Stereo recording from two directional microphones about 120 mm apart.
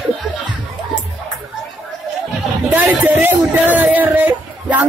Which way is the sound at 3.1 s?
15° right (ahead or behind).